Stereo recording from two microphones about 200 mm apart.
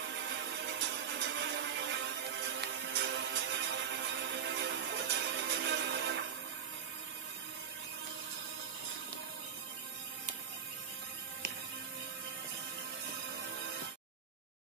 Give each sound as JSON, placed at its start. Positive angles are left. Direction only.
{"t": 0.1, "sound": "music", "side_deg": -65}